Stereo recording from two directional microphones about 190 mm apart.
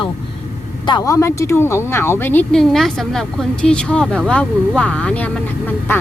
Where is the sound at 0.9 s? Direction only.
20° left (ahead or behind).